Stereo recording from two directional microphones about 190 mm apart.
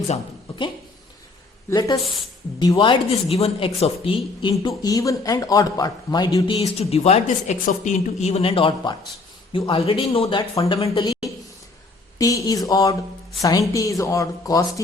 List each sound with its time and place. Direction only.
2.6 s speech: 25° left (ahead or behind)
6.7 s speech: 30° left (ahead or behind)
12.2 s a woman's voice: 20° left (ahead or behind)